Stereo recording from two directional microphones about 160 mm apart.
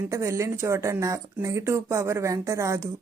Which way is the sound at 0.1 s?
20° right (ahead or behind).